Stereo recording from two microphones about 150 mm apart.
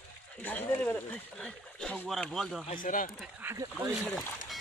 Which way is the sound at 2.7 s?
65° left (ahead or behind).